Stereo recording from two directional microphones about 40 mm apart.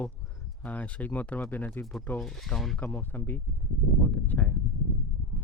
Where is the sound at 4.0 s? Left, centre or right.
Left.